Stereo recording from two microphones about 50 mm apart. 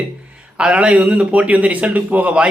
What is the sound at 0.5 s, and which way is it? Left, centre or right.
Speech, right.